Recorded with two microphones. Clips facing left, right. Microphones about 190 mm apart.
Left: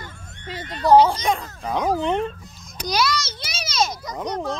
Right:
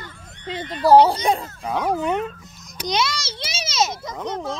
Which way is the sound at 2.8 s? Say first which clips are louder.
Left 1 dB; 25° right (ahead or behind).